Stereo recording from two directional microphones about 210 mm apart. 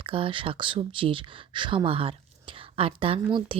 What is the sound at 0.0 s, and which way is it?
A woman's voice, 25° right (ahead or behind).